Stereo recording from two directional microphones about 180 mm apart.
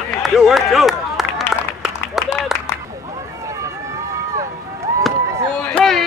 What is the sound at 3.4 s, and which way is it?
Run, 15° right (ahead or behind).